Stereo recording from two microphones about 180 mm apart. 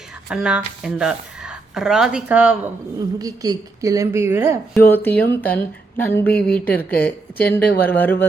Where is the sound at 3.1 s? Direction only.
20° right (ahead or behind).